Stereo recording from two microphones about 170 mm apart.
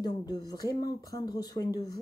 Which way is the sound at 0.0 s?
25° left (ahead or behind).